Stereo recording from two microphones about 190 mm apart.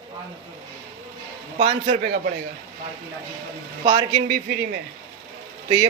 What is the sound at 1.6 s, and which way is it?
Speech, 35° right (ahead or behind).